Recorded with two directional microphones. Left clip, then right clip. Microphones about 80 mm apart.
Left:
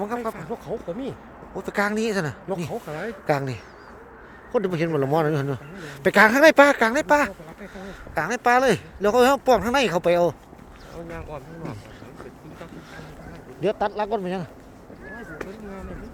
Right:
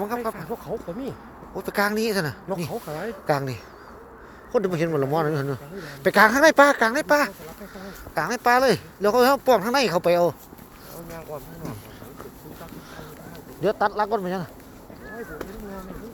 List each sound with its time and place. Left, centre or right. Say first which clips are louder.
0.2 s speech: right 1 dB; centre
1.5 s a woman's voice: right 1 dB; left
2.8 s speech: even; centre
3.2 s a woman's voice: even; left
5.1 s speech: left 2 dB; left
13.6 s speech: right 2 dB; left